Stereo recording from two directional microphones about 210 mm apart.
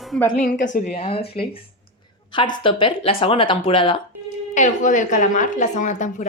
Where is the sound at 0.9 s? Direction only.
25° left (ahead or behind).